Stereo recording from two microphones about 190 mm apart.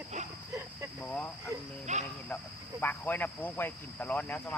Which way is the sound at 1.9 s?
40° right (ahead or behind).